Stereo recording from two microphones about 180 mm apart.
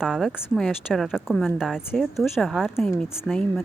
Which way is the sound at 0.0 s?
Centre (ahead or behind).